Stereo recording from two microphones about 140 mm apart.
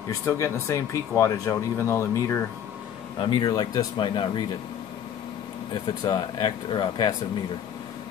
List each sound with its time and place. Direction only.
0.2 s speech: 20° left (ahead or behind)
3.2 s speech: 35° left (ahead or behind)
6.0 s speech: 30° left (ahead or behind)